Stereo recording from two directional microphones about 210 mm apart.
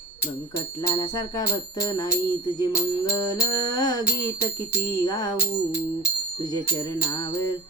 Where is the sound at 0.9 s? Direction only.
15° left (ahead or behind).